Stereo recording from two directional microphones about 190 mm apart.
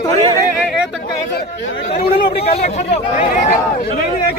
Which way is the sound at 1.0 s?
55° left (ahead or behind).